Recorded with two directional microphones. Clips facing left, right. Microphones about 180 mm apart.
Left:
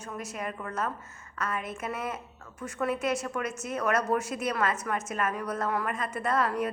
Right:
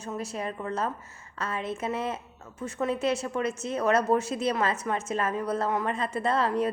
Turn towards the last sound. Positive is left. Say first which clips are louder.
# right 2 dB
turn(degrees=-30)  # may be behind; listen again after turning